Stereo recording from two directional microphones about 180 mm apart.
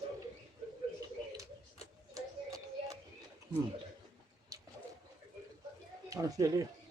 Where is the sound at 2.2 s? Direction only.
20° right (ahead or behind).